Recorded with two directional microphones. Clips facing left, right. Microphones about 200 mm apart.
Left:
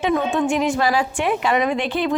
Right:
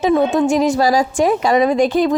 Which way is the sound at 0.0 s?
40° right (ahead or behind).